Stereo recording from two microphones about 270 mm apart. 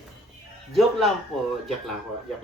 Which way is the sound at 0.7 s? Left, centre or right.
Centre.